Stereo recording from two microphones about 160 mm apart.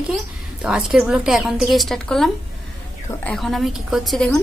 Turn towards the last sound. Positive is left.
turn(degrees=0)  # may be behind; listen again after turning